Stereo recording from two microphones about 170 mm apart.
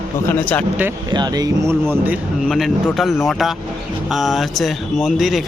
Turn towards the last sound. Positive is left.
turn(degrees=0)  # may be behind; listen again after turning